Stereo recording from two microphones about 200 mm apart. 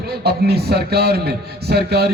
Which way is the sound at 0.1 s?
55° right (ahead or behind).